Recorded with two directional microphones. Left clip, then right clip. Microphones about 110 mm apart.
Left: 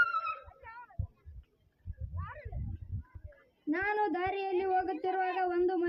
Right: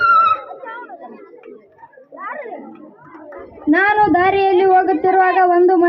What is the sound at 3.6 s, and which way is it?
A woman's voice, 20° left (ahead or behind).